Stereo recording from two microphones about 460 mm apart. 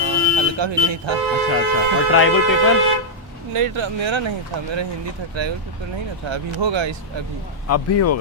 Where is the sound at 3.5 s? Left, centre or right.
Right.